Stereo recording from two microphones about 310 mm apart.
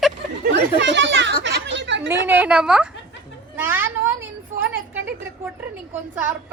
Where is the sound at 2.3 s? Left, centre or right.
Centre.